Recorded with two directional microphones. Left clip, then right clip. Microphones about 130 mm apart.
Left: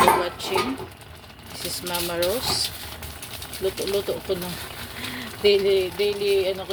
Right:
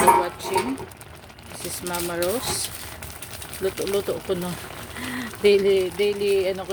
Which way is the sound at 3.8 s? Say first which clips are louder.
Right 1 dB; 50° right (ahead or behind).